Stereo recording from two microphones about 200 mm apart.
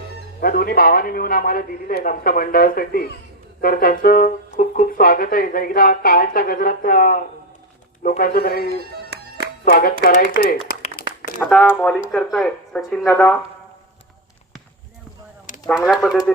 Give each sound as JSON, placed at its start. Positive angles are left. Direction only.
{"t": 0.4, "sound": "speech", "side_deg": 45}
{"t": 8.6, "sound": "music", "side_deg": -55}
{"t": 9.6, "sound": "speech", "side_deg": 45}
{"t": 11.0, "sound": "crumpling", "side_deg": 50}
{"t": 11.4, "sound": "speech", "side_deg": 5}
{"t": 15.6, "sound": "speech", "side_deg": 15}